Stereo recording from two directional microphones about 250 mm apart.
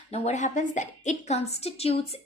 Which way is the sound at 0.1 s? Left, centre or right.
Left.